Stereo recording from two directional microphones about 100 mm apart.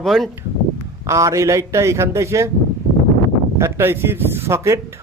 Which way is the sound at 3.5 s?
25° right (ahead or behind).